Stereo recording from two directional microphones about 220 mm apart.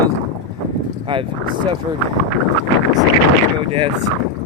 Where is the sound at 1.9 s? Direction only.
20° right (ahead or behind).